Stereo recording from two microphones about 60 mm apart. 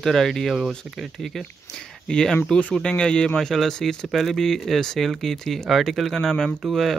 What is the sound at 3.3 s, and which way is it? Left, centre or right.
Speech, centre.